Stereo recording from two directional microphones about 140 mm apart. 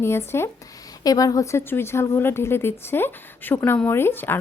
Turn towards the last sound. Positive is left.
turn(degrees=15)  # may be behind; listen again after turning